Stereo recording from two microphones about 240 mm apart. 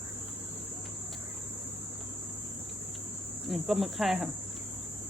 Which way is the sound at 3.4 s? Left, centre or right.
Centre.